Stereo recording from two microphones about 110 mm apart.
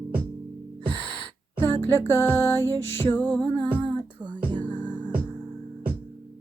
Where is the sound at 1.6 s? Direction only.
20° left (ahead or behind).